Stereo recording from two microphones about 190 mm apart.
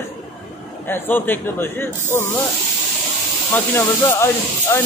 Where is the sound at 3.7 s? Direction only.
15° left (ahead or behind).